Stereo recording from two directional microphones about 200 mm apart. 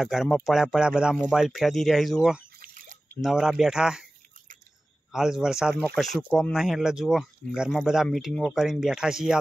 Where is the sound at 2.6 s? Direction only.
45° right (ahead or behind).